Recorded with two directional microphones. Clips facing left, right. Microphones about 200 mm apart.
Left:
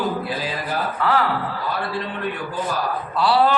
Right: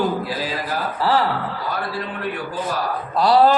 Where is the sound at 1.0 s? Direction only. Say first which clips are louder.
Right 2 dB; 35° right (ahead or behind).